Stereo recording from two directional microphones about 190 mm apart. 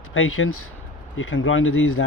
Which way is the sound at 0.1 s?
90° left.